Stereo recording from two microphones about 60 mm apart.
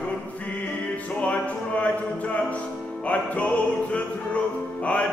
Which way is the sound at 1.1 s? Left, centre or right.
Left.